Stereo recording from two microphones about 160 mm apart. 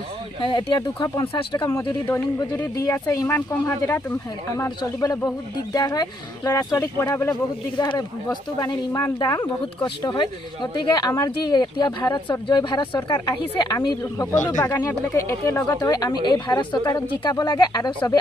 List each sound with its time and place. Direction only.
0.4 s speech: 30° left (ahead or behind)
7.7 s speech: 30° left (ahead or behind)